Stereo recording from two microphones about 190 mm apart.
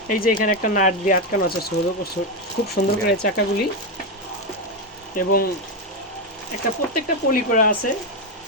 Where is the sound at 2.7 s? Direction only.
55° left (ahead or behind).